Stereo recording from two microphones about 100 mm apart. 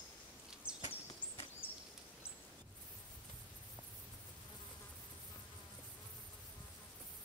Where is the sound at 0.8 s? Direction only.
70° left (ahead or behind).